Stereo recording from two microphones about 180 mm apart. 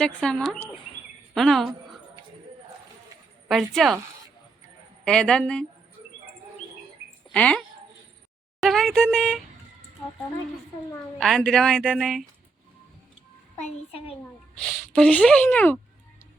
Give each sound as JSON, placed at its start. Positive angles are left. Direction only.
{"t": 0.0, "sound": "a woman's voice", "side_deg": 5}
{"t": 3.5, "sound": "a woman's voice", "side_deg": 0}
{"t": 5.0, "sound": "a woman's voice", "side_deg": 5}
{"t": 7.3, "sound": "speech", "side_deg": 5}
{"t": 8.6, "sound": "a woman's voice", "side_deg": 0}
{"t": 10.9, "sound": "a woman's voice", "side_deg": 0}
{"t": 13.6, "sound": "a child's voice", "side_deg": 35}
{"t": 14.7, "sound": "a woman's voice", "side_deg": 5}